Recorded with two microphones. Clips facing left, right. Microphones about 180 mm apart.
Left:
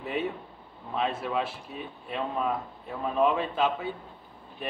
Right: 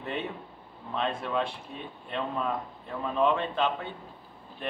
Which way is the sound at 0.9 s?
5° left (ahead or behind).